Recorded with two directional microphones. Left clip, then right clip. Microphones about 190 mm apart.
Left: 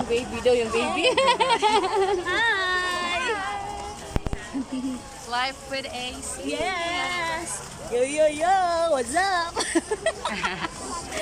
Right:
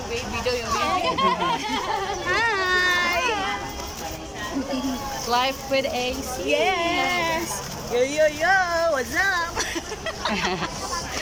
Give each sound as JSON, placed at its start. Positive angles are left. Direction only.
{"t": 0.1, "sound": "speech", "side_deg": 45}
{"t": 1.0, "sound": "speech", "side_deg": 55}
{"t": 2.2, "sound": "a sound", "side_deg": -5}
{"t": 5.3, "sound": "speech", "side_deg": -15}
{"t": 6.5, "sound": "speech", "side_deg": -5}
{"t": 6.9, "sound": "speech", "side_deg": -20}
{"t": 7.9, "sound": "speech", "side_deg": 10}